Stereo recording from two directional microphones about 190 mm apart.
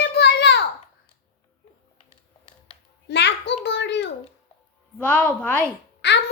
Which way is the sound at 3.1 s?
65° left (ahead or behind).